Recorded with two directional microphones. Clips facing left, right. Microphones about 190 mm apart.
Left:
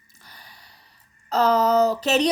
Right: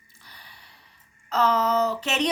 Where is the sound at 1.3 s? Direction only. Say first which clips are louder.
Left 4 dB; 35° left (ahead or behind).